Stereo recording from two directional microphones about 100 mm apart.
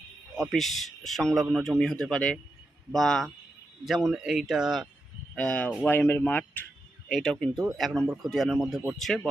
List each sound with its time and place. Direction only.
0.3 s a man's voice: centre (ahead or behind)
5.3 s speech: 10° left (ahead or behind)
7.1 s a man's voice: 5° left (ahead or behind)